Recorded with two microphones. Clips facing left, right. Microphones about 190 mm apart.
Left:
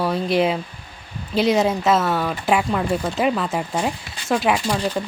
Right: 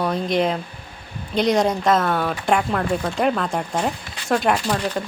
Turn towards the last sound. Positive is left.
turn(degrees=5)  # may be behind; listen again after turning